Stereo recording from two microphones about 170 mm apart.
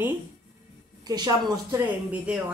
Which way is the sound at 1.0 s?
25° right (ahead or behind).